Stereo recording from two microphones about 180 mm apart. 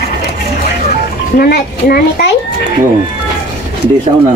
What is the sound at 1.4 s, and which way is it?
Speech, 55° left (ahead or behind).